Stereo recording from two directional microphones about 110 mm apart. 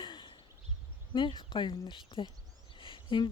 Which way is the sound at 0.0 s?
50° left (ahead or behind).